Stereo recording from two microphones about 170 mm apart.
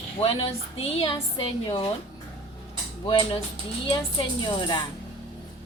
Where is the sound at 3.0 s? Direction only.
30° left (ahead or behind).